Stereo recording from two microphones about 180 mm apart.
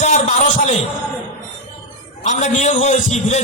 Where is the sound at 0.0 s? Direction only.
40° left (ahead or behind).